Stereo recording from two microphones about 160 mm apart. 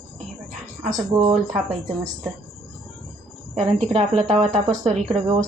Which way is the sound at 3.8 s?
40° right (ahead or behind).